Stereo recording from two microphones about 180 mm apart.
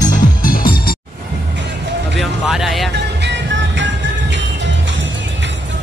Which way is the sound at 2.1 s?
Centre (ahead or behind).